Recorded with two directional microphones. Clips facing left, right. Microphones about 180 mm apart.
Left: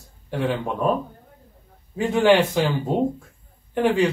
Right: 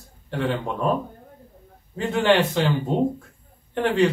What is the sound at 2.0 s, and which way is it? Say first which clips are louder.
Speech: left 2 dB; 10° left (ahead or behind).